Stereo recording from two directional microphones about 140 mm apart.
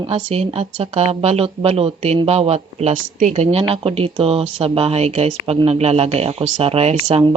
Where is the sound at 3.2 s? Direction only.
55° right (ahead or behind).